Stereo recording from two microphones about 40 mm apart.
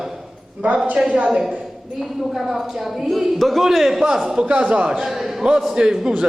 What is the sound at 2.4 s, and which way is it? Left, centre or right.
A man's voice, centre.